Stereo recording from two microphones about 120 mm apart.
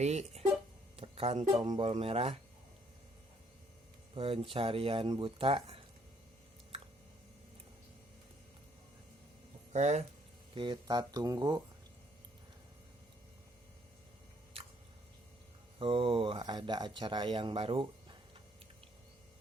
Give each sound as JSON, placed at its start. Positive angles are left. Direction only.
{"t": 0.0, "sound": "speech", "side_deg": -65}
{"t": 0.9, "sound": "music", "side_deg": -50}
{"t": 1.8, "sound": "speech", "side_deg": -55}
{"t": 4.1, "sound": "speech", "side_deg": -50}
{"t": 9.7, "sound": "speech", "side_deg": -70}
{"t": 10.5, "sound": "speech", "side_deg": -45}
{"t": 15.8, "sound": "speech", "side_deg": -45}